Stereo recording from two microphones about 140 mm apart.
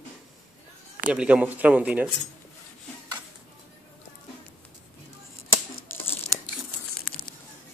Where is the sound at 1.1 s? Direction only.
10° right (ahead or behind).